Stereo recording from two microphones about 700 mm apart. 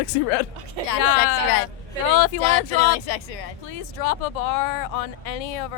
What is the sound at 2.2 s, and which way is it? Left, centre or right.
Speech, left.